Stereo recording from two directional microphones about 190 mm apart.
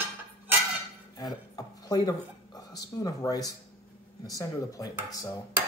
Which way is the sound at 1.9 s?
20° left (ahead or behind).